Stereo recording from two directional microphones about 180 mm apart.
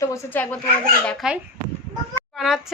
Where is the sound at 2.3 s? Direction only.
Centre (ahead or behind).